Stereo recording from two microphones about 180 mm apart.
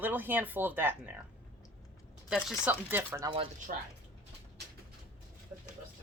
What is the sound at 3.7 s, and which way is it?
Speech, 45° right (ahead or behind).